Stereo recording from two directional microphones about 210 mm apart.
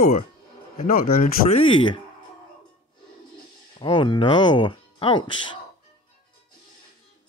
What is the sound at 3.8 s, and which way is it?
Speech, 20° left (ahead or behind).